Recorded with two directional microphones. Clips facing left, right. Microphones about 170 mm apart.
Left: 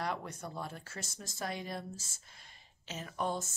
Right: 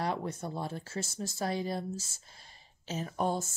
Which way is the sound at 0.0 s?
30° right (ahead or behind).